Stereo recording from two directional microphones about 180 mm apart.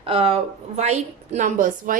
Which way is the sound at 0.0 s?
30° right (ahead or behind).